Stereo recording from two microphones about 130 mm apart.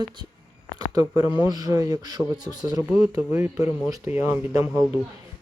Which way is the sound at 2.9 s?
15° right (ahead or behind).